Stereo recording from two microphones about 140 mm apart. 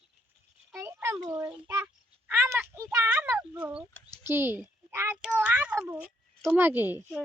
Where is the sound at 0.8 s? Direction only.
20° right (ahead or behind).